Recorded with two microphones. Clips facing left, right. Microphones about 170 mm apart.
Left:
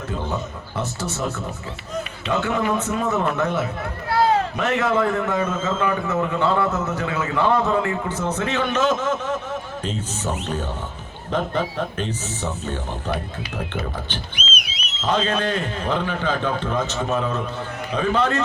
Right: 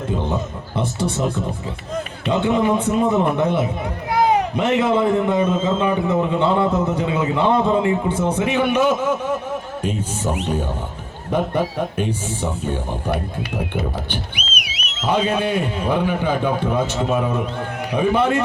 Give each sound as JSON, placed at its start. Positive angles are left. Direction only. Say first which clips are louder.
{"t": 0.8, "sound": "a man's voice", "louder": "right 5 dB", "side_deg": -15}
{"t": 2.3, "sound": "a man's voice", "louder": "right 4 dB", "side_deg": -20}
{"t": 14.7, "sound": "a sound", "louder": "right 2 dB", "side_deg": -70}
{"t": 15.0, "sound": "a man's voice", "louder": "right 2 dB", "side_deg": -15}